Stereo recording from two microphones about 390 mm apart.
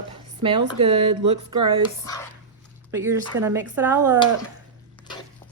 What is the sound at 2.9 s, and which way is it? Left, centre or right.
Speech, centre.